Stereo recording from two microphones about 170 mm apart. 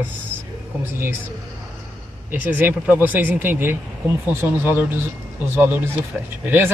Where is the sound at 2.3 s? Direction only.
10° right (ahead or behind).